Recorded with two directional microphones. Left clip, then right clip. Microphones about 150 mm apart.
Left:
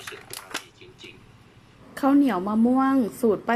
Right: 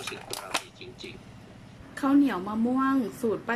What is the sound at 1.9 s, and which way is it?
A woman's voice, 45° left (ahead or behind).